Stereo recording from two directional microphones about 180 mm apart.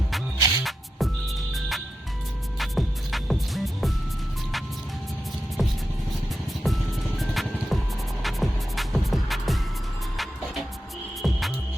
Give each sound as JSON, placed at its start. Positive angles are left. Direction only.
{"t": 0.3, "sound": "music", "side_deg": -20}
{"t": 0.6, "sound": "music", "side_deg": 0}
{"t": 5.6, "sound": "music", "side_deg": 0}
{"t": 11.2, "sound": "music", "side_deg": 0}